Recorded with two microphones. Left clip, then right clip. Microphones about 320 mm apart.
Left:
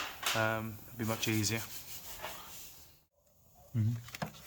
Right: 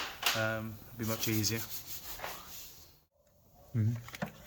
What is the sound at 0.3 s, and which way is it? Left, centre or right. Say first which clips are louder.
Speech: left 1 dB; centre.